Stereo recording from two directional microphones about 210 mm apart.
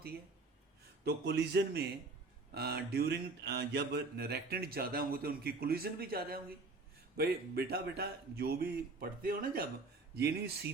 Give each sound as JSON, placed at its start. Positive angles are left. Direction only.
{"t": 1.0, "sound": "mantra", "side_deg": -55}